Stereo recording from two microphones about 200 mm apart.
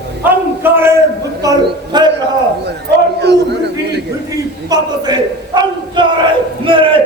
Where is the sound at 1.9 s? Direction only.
20° right (ahead or behind).